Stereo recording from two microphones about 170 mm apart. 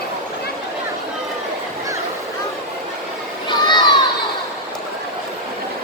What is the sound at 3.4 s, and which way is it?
Vehicle, 25° left (ahead or behind).